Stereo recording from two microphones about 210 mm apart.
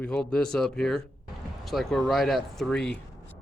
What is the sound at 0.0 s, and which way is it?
Speech, 5° left (ahead or behind).